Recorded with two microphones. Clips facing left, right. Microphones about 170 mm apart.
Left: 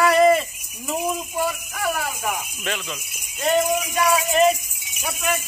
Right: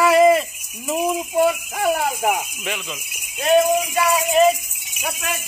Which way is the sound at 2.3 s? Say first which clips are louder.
Right 4 dB; 15° right (ahead or behind).